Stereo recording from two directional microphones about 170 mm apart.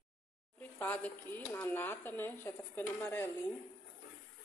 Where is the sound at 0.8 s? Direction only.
10° left (ahead or behind).